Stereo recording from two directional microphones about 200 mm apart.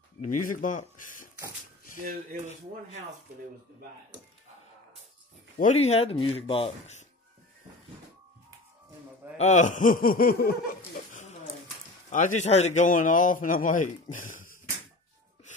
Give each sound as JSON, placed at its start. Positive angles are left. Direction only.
{"t": 0.4, "sound": "speech", "side_deg": 40}
{"t": 5.6, "sound": "speech", "side_deg": 35}
{"t": 9.4, "sound": "speech", "side_deg": 35}
{"t": 12.1, "sound": "a man's voice", "side_deg": 40}